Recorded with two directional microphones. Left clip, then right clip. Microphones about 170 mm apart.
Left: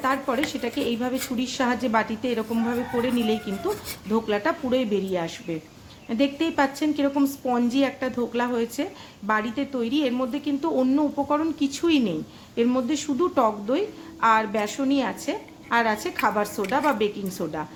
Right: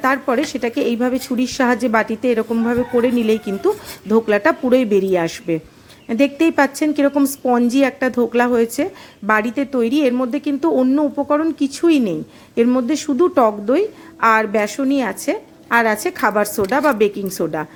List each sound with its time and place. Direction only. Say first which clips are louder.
0.0 s a woman's voice: right 7 dB; 40° right (ahead or behind)